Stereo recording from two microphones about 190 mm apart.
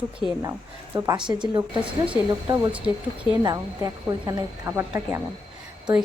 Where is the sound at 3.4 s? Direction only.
20° right (ahead or behind).